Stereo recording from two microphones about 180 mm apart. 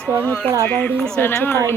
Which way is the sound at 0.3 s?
10° left (ahead or behind).